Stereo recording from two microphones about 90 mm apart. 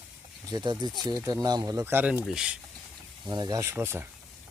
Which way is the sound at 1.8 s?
25° right (ahead or behind).